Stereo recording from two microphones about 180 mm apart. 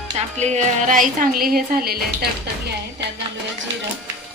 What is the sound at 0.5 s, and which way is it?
A woman's voice, 45° right (ahead or behind).